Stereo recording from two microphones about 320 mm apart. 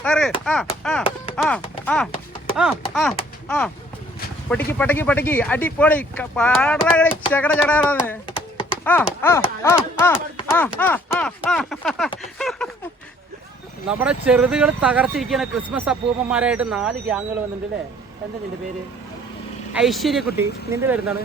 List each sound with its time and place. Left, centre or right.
0.0 s speech: centre
4.4 s speech: centre
7.1 s a sound: centre
7.3 s speech: centre
8.3 s typing: centre
8.8 s speech: centre
13.8 s speech: centre
19.7 s speech: centre